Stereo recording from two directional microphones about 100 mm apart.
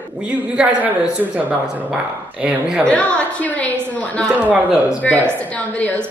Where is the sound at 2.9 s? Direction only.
15° left (ahead or behind).